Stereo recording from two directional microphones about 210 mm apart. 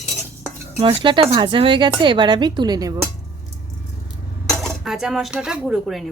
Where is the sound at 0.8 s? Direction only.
25° right (ahead or behind).